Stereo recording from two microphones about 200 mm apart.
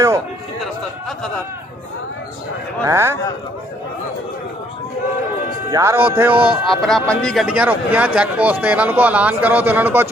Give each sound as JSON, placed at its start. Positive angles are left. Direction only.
{"t": 2.8, "sound": "speech", "side_deg": -15}
{"t": 5.7, "sound": "speech", "side_deg": -15}